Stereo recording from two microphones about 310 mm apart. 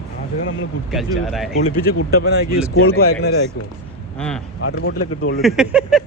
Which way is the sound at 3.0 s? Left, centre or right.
Left.